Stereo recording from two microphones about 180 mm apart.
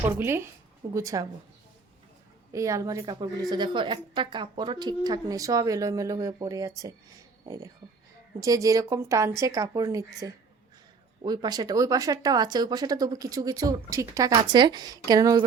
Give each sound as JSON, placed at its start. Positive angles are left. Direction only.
{"t": 0.0, "sound": "a woman's voice", "side_deg": -15}
{"t": 2.5, "sound": "a woman's voice", "side_deg": -15}